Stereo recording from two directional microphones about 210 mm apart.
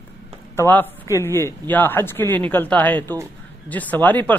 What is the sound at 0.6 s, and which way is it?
A man's voice, 10° left (ahead or behind).